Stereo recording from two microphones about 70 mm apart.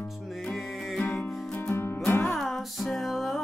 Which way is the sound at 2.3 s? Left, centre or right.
Centre.